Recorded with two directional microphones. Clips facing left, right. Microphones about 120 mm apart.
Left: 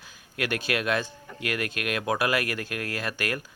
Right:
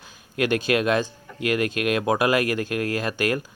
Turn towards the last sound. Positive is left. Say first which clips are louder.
# right 7 dB
turn(degrees=-25)  # may be behind; listen again after turning